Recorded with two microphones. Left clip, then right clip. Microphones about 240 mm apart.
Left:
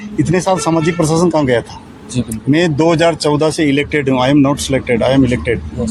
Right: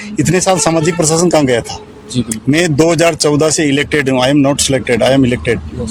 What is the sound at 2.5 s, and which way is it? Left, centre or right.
Speech, right.